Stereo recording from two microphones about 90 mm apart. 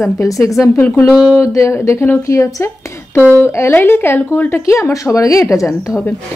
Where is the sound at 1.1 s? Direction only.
10° right (ahead or behind).